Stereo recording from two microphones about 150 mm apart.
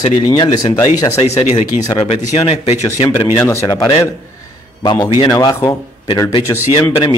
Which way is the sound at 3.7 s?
30° left (ahead or behind).